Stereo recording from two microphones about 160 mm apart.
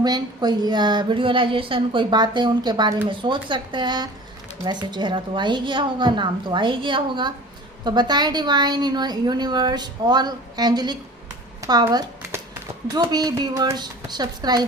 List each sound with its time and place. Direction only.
0.0 s a woman's voice: 25° right (ahead or behind)